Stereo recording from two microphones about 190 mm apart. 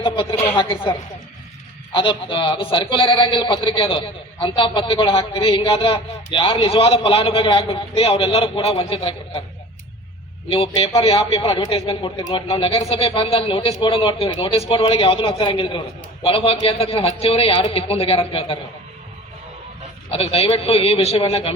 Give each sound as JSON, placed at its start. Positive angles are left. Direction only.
{"t": 0.0, "sound": "a woman's voice", "side_deg": 25}
{"t": 10.5, "sound": "a man's voice", "side_deg": 30}
{"t": 20.1, "sound": "a man's voice", "side_deg": 30}